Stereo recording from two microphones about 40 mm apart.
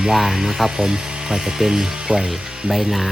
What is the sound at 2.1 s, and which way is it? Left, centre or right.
Speech, right.